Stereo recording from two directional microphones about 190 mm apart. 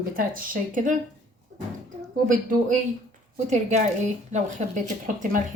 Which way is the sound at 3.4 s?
40° right (ahead or behind).